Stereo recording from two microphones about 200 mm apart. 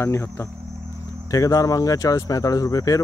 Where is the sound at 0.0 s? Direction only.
15° left (ahead or behind).